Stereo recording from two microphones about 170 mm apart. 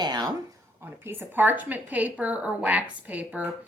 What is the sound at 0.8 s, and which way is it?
Speech, 15° right (ahead or behind).